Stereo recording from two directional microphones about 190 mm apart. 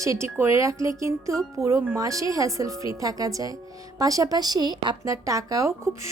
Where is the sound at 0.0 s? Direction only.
15° right (ahead or behind).